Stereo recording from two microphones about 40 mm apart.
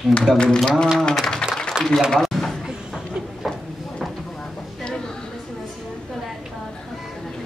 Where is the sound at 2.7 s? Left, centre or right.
Centre.